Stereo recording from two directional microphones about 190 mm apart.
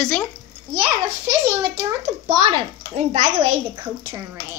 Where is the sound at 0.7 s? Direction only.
20° right (ahead or behind).